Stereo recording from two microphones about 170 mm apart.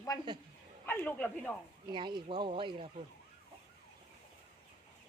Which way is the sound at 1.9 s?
25° right (ahead or behind).